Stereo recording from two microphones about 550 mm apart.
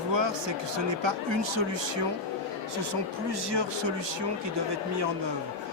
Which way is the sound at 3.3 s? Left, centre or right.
Right.